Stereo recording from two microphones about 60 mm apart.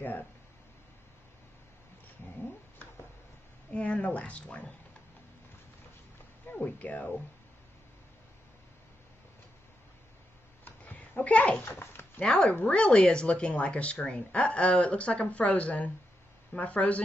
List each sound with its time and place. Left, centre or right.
2.2 s speech: left
3.7 s speech: left
6.4 s speech: left
10.6 s a sound: left
11.6 s dog: left
12.2 s speech: centre